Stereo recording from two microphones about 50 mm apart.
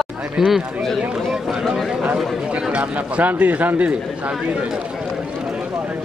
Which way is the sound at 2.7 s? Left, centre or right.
Right.